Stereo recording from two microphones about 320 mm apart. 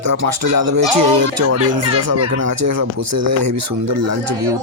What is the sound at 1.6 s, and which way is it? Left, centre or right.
Speech, right.